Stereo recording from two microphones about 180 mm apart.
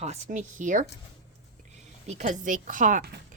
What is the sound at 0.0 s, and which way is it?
Speech, 40° right (ahead or behind).